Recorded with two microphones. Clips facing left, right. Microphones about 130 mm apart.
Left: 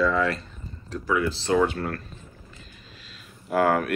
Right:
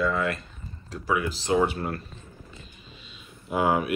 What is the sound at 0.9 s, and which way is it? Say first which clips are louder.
Speech: left 2 dB; 20° right (ahead or behind).